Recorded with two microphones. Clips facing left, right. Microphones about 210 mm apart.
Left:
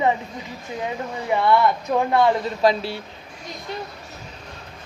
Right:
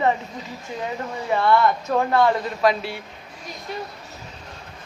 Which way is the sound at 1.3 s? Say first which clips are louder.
Even; 15° left (ahead or behind).